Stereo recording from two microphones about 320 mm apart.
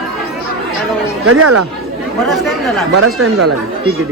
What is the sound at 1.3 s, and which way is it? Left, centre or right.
Speech, right.